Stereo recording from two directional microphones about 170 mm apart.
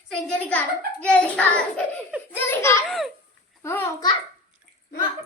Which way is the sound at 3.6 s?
15° left (ahead or behind).